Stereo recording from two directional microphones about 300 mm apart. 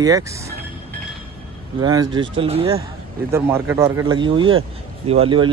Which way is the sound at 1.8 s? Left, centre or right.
Centre.